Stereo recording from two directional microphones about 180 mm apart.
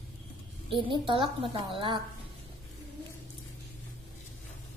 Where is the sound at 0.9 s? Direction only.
30° right (ahead or behind).